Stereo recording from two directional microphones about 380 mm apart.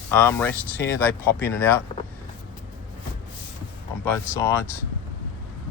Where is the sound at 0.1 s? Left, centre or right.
Centre.